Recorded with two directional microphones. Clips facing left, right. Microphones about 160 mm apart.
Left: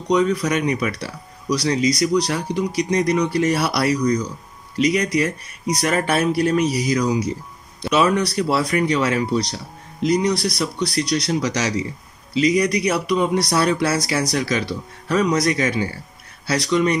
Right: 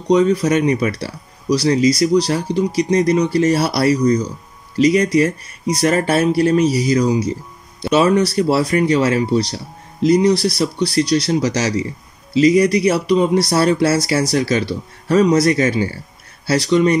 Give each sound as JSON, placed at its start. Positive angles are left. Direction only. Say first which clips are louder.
{"t": 0.1, "sound": "speech", "louder": "right 5 dB", "side_deg": -30}